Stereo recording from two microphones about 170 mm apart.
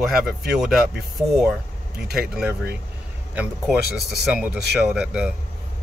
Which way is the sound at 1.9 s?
70° right (ahead or behind).